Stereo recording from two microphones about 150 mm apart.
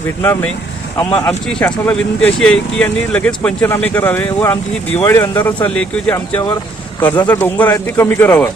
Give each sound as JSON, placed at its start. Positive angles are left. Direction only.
{"t": 0.2, "sound": "speech", "side_deg": 15}
{"t": 6.1, "sound": "speech", "side_deg": 20}